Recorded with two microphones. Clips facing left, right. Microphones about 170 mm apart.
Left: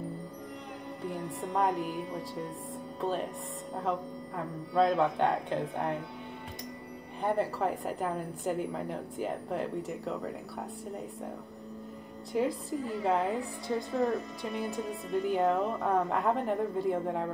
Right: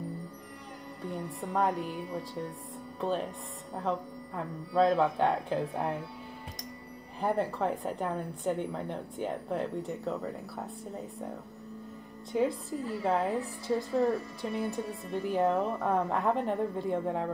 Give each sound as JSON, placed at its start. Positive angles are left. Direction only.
{"t": 1.5, "sound": "a woman's voice", "side_deg": 0}
{"t": 3.0, "sound": "speech", "side_deg": 0}
{"t": 4.7, "sound": "a woman's voice", "side_deg": 0}
{"t": 7.2, "sound": "a woman's voice", "side_deg": 0}
{"t": 12.3, "sound": "a woman's voice", "side_deg": 0}
{"t": 14.6, "sound": "speech", "side_deg": 20}
{"t": 15.1, "sound": "a woman's voice", "side_deg": 0}